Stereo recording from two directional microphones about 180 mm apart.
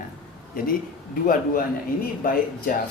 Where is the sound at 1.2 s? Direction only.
50° left (ahead or behind).